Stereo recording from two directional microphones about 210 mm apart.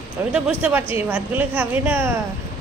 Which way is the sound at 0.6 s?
10° right (ahead or behind).